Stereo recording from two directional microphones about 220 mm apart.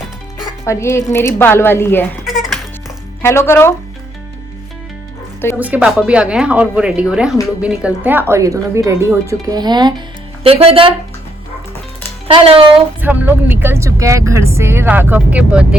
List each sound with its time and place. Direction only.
0.6 s a woman's voice: 10° left (ahead or behind)
3.2 s a woman's voice: 10° left (ahead or behind)
5.5 s speech: 5° right (ahead or behind); by 10.9 s 25° right (ahead or behind)
12.3 s speech: 25° right (ahead or behind)
13.0 s speech: 10° right (ahead or behind)